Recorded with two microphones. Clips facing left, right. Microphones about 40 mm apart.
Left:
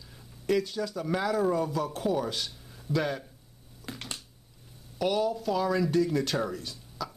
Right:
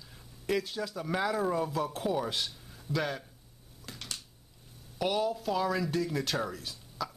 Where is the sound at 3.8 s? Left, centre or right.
Left.